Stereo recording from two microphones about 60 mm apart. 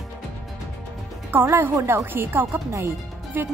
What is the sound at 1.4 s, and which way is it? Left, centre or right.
A woman's voice, right.